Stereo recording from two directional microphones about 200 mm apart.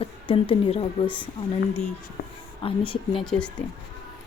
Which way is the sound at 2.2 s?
45° left (ahead or behind).